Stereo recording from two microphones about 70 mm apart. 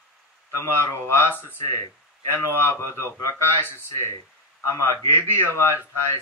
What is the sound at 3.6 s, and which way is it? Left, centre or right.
Speech, left.